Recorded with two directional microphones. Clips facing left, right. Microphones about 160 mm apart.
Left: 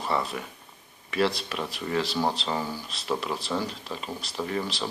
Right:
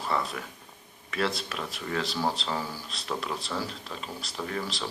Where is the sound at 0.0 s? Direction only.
Centre (ahead or behind).